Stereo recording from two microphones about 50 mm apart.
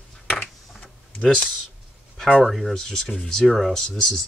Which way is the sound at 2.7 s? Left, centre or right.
Centre.